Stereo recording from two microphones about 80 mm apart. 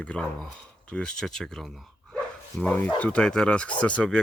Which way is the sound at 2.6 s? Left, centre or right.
Centre.